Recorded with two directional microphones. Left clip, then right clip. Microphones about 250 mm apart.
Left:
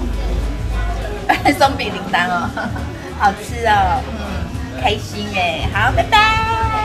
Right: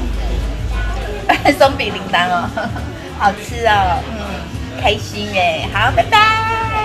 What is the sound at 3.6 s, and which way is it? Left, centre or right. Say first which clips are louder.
Speech: right 1 dB; right.